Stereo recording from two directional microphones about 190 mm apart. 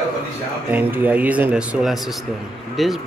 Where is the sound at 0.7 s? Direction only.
10° right (ahead or behind).